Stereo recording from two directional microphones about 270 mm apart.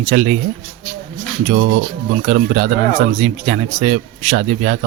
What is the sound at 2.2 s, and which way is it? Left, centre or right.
Speech, right.